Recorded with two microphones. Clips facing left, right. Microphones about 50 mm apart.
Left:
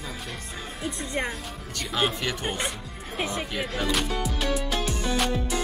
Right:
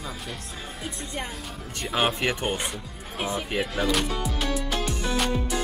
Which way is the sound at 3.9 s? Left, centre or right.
Centre.